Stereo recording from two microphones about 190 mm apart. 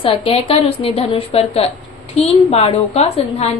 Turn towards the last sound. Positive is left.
turn(degrees=35)  # may be behind; listen again after turning